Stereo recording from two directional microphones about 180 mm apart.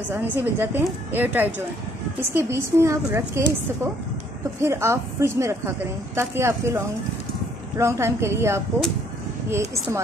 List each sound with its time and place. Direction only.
0.1 s a woman's voice: 10° right (ahead or behind)